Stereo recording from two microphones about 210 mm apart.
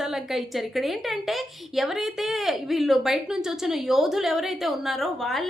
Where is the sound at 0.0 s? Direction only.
Centre (ahead or behind).